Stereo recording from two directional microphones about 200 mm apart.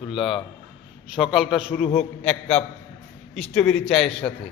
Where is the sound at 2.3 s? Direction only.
30° left (ahead or behind).